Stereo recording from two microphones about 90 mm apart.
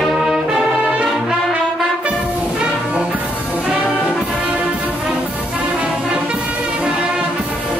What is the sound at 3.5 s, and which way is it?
Brass instrument, 5° right (ahead or behind).